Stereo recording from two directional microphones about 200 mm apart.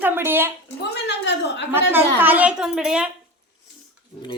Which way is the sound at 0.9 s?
60° left (ahead or behind).